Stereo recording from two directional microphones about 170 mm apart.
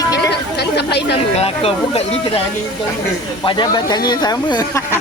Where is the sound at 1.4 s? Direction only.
35° left (ahead or behind).